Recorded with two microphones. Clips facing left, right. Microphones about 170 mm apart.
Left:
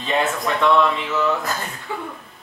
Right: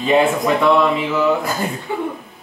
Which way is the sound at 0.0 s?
15° right (ahead or behind).